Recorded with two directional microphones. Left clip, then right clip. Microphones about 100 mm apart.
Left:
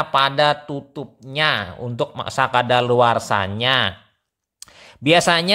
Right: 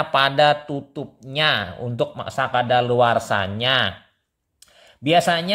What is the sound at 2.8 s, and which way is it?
Speech, 20° left (ahead or behind).